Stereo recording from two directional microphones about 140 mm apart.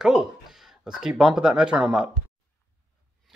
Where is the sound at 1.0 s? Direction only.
5° right (ahead or behind).